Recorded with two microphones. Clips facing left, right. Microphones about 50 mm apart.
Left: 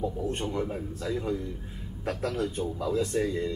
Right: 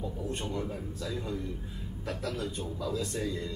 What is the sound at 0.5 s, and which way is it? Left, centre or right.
A man's voice, left.